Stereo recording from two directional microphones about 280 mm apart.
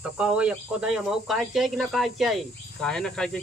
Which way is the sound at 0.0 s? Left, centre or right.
Centre.